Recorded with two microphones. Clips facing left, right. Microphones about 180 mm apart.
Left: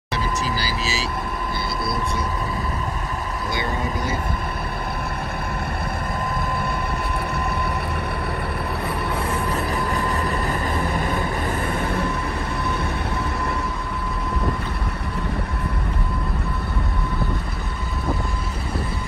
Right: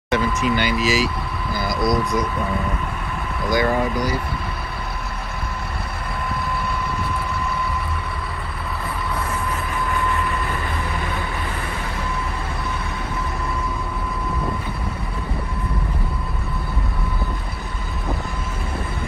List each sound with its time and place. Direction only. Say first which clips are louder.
0.2 s speech: right 5 dB; 35° left (ahead or behind)
3.5 s speech: right 8 dB; 25° left (ahead or behind)
9.8 s vehicle: even; 40° left (ahead or behind)